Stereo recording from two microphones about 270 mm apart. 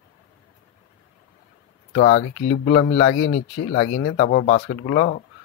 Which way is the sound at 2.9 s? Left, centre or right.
Left.